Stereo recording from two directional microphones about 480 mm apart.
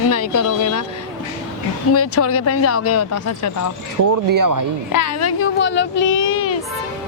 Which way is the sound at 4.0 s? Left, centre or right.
Right.